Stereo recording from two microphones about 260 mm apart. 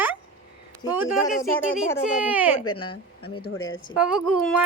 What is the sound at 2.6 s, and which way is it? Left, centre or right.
Speech, left.